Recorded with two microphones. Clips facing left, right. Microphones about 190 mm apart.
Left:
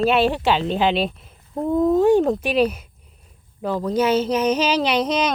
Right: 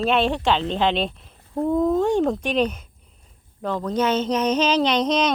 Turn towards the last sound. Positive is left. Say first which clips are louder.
# even
turn(degrees=10)  # may be behind; listen again after turning